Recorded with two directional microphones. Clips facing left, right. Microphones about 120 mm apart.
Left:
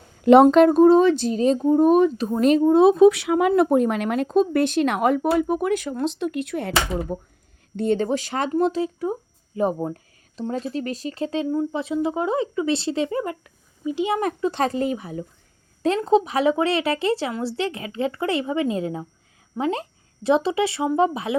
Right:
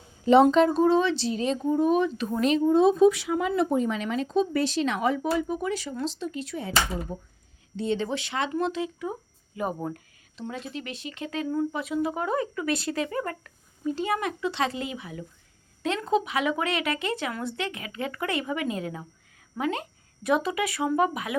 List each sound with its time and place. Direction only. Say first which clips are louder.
0.5 s speech: left 7 dB; 55° left (ahead or behind)
2.7 s speech: left 5 dB; 65° left (ahead or behind)
7.8 s speech: left 6 dB; 50° left (ahead or behind); by 13.3 s 25° left (ahead or behind)
13.4 s a sound: left 2 dB; 15° left (ahead or behind)
14.2 s speech: left 5 dB; 40° left (ahead or behind)